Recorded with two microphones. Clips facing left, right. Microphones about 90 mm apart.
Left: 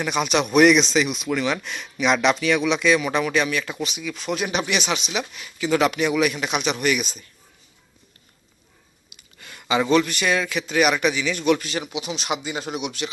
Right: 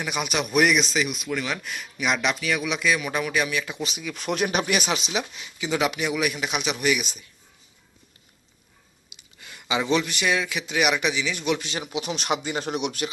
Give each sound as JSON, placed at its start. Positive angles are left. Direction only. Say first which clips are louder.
{"t": 0.0, "sound": "speech", "louder": "left 5 dB", "side_deg": -10}
{"t": 3.8, "sound": "speech", "louder": "left 3 dB", "side_deg": -35}
{"t": 4.1, "sound": "speech", "louder": "right 1 dB", "side_deg": -50}
{"t": 5.5, "sound": "a man's voice", "louder": "left 5 dB", "side_deg": -15}
{"t": 9.4, "sound": "a sound", "louder": "left 4 dB", "side_deg": -15}
{"t": 9.9, "sound": "a man's voice", "louder": "left 3 dB", "side_deg": -15}
{"t": 12.0, "sound": "speech", "louder": "right 1 dB", "side_deg": -45}
{"t": 12.6, "sound": "speech", "louder": "right 1 dB", "side_deg": 10}